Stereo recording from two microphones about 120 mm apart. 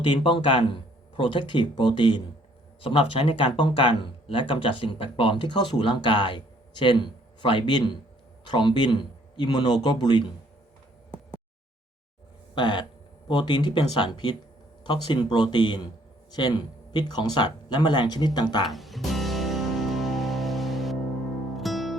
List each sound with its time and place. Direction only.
0.0 s speech: 45° left (ahead or behind)
12.5 s speech: 40° left (ahead or behind)
18.6 s music: centre (ahead or behind)